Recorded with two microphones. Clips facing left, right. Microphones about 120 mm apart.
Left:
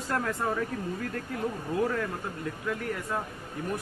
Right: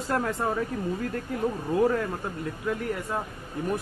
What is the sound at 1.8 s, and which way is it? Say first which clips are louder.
Speech: right 5 dB; 30° right (ahead or behind).